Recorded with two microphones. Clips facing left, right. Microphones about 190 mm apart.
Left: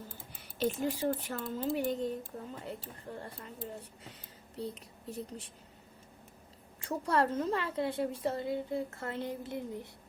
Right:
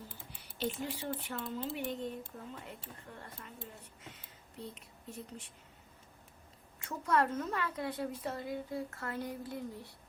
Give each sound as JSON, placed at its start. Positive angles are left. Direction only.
{"t": 0.6, "sound": "speech", "side_deg": 45}
{"t": 4.1, "sound": "a sound", "side_deg": 35}
{"t": 6.7, "sound": "a woman's voice", "side_deg": 30}